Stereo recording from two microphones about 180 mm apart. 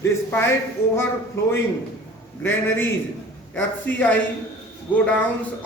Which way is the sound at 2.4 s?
10° left (ahead or behind).